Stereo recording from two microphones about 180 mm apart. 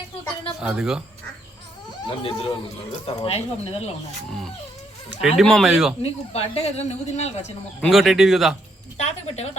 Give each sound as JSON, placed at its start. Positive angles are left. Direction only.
{"t": 0.6, "sound": "speech", "side_deg": -5}
{"t": 2.0, "sound": "speech", "side_deg": 30}
{"t": 4.3, "sound": "speech", "side_deg": 0}
{"t": 6.0, "sound": "speech", "side_deg": 35}
{"t": 7.8, "sound": "speech", "side_deg": 0}
{"t": 9.0, "sound": "speech", "side_deg": 35}